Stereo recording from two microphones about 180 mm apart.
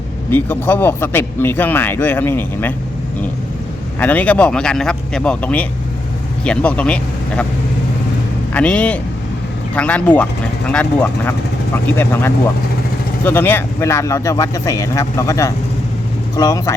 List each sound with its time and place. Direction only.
0.3 s speech: 10° left (ahead or behind)
4.0 s speech: 10° left (ahead or behind)
8.5 s speech: 5° left (ahead or behind)